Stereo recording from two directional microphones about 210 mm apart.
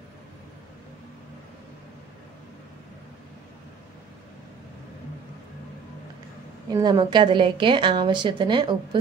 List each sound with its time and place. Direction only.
6.7 s a woman's voice: 20° right (ahead or behind)